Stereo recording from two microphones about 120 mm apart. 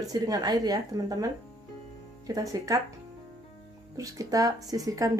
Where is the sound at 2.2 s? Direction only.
30° right (ahead or behind).